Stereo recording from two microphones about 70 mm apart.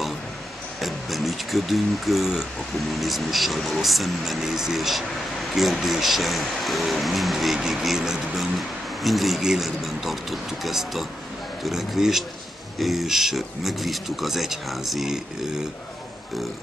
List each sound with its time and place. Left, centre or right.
0.7 s speech: centre